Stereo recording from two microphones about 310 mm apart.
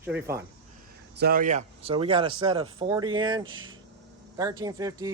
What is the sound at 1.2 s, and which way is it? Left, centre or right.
Speech, right.